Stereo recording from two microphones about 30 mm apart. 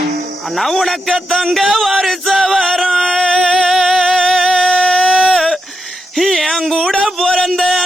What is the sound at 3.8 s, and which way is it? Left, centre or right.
Music, centre.